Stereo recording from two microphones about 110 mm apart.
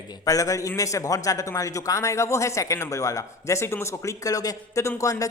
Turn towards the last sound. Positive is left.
turn(degrees=30)  # may be behind; listen again after turning